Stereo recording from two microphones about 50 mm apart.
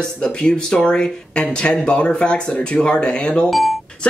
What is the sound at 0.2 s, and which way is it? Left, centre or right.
Speech, centre.